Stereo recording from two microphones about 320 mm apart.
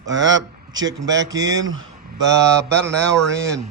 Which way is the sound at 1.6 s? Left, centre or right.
Right.